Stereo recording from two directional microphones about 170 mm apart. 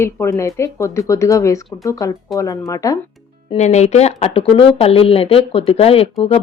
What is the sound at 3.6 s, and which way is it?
Speech, 40° left (ahead or behind).